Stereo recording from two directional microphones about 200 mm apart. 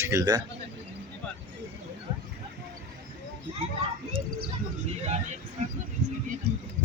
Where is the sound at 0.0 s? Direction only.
15° right (ahead or behind).